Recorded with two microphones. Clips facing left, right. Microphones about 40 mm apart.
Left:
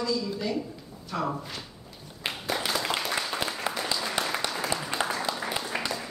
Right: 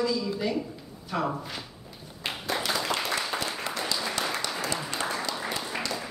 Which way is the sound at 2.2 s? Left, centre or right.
Centre.